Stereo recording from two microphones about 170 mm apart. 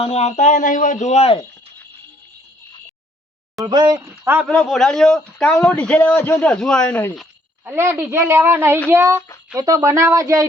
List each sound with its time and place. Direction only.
0.0 s speech: 40° left (ahead or behind)
3.6 s speech: 20° right (ahead or behind)
4.2 s speech: 10° right (ahead or behind)
4.4 s a man's voice: centre (ahead or behind)
7.6 s a woman's voice: 10° right (ahead or behind)